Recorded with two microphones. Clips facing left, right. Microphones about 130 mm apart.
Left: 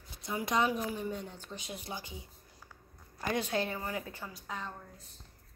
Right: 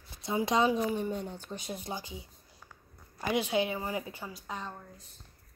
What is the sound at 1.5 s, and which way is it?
Speech, 45° right (ahead or behind).